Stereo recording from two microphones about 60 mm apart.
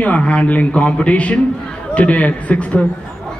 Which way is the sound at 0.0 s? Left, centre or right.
Left.